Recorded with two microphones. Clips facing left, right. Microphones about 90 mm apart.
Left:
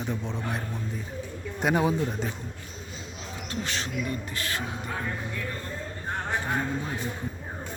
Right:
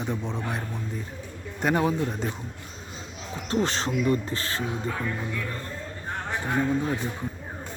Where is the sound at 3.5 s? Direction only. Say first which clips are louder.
Right 7 dB; 35° right (ahead or behind).